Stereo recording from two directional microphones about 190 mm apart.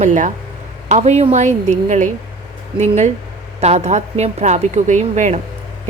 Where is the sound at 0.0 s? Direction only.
40° right (ahead or behind).